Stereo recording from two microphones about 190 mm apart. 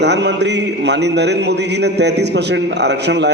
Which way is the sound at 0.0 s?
65° right (ahead or behind).